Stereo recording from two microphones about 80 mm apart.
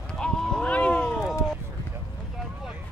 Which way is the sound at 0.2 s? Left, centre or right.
Centre.